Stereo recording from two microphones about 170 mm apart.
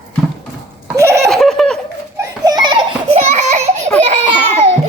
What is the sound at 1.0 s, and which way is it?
Laughter, 15° right (ahead or behind).